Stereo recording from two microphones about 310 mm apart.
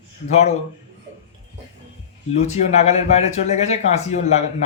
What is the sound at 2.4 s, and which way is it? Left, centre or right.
Speech, left.